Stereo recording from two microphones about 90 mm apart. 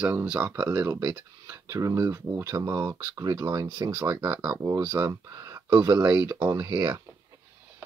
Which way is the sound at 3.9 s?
30° right (ahead or behind).